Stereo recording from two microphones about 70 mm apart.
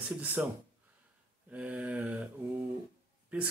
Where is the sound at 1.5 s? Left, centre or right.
Centre.